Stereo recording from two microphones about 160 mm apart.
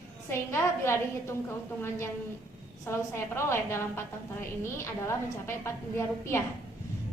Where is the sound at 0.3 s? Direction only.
15° left (ahead or behind).